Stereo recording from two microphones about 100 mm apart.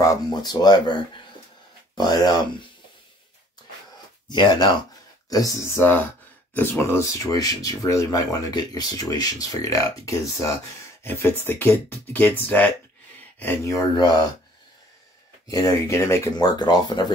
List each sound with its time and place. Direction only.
0.0 s speech: 35° left (ahead or behind)
4.3 s speech: 45° left (ahead or behind)
5.3 s speech: 30° left (ahead or behind)
13.9 s speech: 45° left (ahead or behind)
15.5 s speech: 35° left (ahead or behind)